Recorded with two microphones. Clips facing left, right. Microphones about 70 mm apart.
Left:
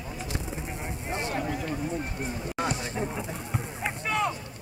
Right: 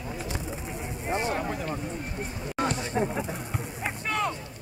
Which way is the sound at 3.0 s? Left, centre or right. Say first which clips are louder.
Right 8 dB; right.